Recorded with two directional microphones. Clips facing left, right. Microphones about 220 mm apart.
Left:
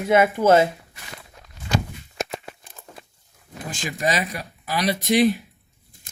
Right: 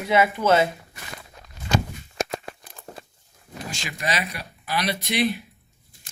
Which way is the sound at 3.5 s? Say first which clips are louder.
Left 3 dB; 50° left (ahead or behind).